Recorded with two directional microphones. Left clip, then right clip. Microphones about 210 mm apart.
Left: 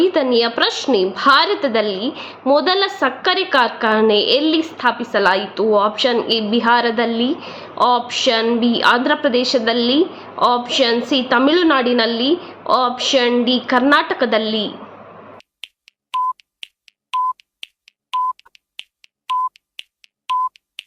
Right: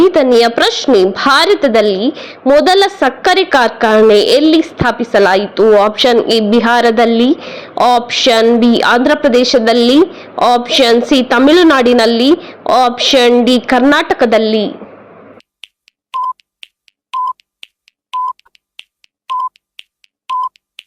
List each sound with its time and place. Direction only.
0.0 s a woman's voice: 30° right (ahead or behind)
15.4 s finger snapping: centre (ahead or behind)